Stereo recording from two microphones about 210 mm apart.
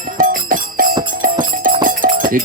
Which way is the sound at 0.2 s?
40° right (ahead or behind).